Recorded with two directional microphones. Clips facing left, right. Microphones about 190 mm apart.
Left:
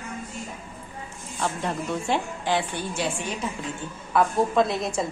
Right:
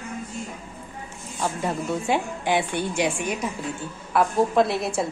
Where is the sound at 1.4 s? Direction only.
10° right (ahead or behind).